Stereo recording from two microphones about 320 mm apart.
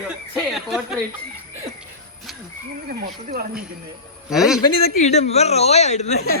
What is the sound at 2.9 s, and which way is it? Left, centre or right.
Speech, right.